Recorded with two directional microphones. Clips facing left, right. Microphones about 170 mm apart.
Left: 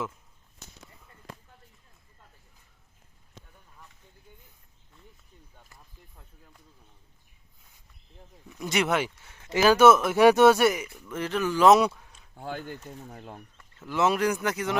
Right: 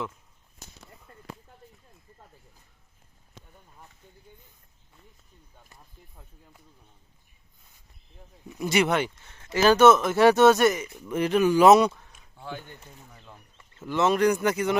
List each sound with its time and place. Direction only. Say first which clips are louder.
5.7 s speech: right 5 dB; 5° right (ahead or behind)
8.4 s speech: right 3 dB; 5° right (ahead or behind)
10.8 s speech: right 6 dB; 20° right (ahead or behind)
11.7 s speech: right 2 dB; 5° left (ahead or behind)
13.1 s speech: left 8 dB; 55° left (ahead or behind)
13.6 s speech: right 1 dB; centre (ahead or behind)